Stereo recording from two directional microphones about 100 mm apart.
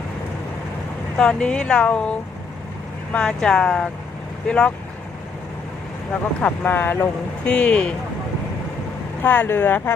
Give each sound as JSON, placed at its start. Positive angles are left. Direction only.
{"t": 1.1, "sound": "speech", "side_deg": 5}
{"t": 6.4, "sound": "speech", "side_deg": 20}
{"t": 9.2, "sound": "speech", "side_deg": 15}